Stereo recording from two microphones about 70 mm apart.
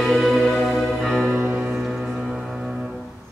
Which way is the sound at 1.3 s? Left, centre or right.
Right.